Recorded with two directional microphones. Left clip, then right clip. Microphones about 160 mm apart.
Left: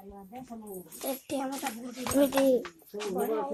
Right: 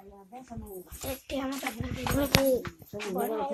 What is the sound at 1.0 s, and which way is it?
Speech, 70° left (ahead or behind).